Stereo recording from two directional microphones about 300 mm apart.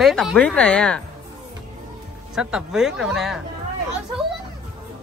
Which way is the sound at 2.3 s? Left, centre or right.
Centre.